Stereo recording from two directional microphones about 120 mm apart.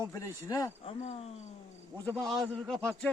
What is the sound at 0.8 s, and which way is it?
Speech, 60° left (ahead or behind).